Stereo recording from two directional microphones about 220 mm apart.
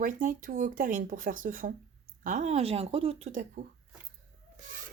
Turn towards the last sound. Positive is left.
turn(degrees=-35)  # may be behind; listen again after turning